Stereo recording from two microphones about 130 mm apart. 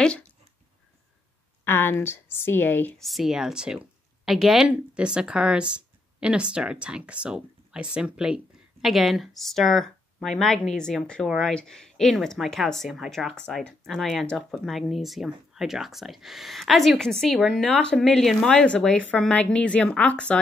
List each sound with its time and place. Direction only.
1.6 s a woman's voice: 15° left (ahead or behind)
3.0 s a woman's voice: centre (ahead or behind)